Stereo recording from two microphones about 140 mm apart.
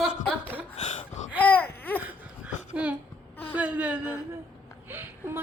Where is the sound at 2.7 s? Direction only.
10° right (ahead or behind).